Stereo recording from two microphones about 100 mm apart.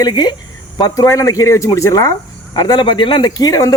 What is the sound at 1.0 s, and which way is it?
Speech, 35° left (ahead or behind).